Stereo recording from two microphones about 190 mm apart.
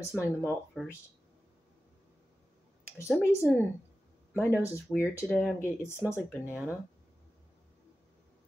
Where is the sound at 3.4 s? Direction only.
Centre (ahead or behind).